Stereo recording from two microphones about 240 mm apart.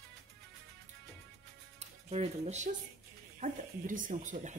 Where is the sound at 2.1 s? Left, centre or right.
Right.